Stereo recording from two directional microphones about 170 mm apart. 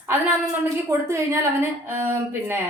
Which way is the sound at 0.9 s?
15° right (ahead or behind).